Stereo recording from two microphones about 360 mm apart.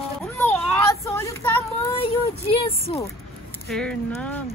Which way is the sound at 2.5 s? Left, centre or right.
Centre.